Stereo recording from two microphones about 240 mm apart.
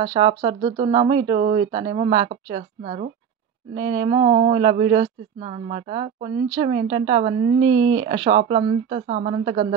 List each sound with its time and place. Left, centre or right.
0.0 s speech: centre